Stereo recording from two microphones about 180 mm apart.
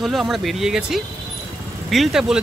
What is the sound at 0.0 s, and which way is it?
Speech, centre (ahead or behind).